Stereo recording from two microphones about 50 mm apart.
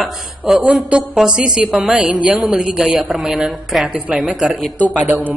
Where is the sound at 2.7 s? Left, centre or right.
Centre.